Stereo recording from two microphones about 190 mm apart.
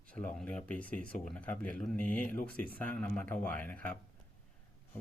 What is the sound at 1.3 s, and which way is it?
Speech, 5° left (ahead or behind).